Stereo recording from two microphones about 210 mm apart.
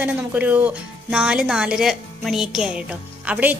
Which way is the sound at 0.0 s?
10° right (ahead or behind).